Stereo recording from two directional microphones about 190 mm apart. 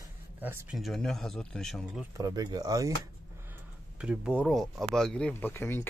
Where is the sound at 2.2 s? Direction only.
20° right (ahead or behind).